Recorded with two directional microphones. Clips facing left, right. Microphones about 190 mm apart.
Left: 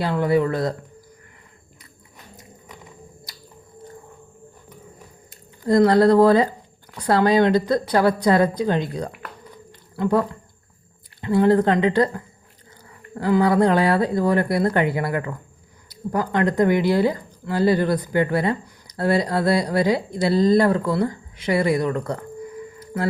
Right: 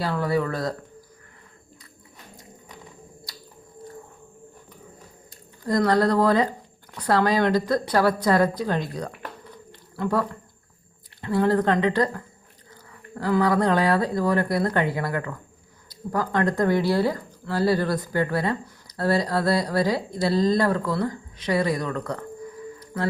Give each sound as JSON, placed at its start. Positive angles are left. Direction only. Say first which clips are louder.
{"t": 0.0, "sound": "speech", "louder": "left 5 dB", "side_deg": 20}
{"t": 5.6, "sound": "speech", "louder": "left 6 dB", "side_deg": 25}
{"t": 16.3, "sound": "speech", "louder": "left 3 dB", "side_deg": 20}